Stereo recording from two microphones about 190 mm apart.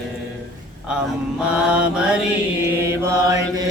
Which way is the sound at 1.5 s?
5° right (ahead or behind).